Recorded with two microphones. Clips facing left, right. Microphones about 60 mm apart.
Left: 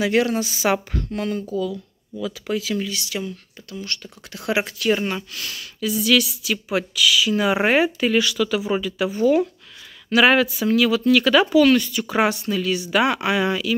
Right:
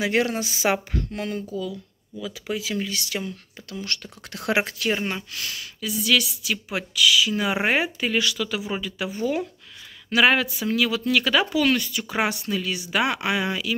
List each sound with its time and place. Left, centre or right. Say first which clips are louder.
0.0 s speech: left 3 dB; right
2.6 s speech: left 3 dB; right
2.9 s speech: left 2 dB; right
3.7 s speech: even; right
5.0 s speech: left 3 dB; right
5.4 s speech: left 4 dB; centre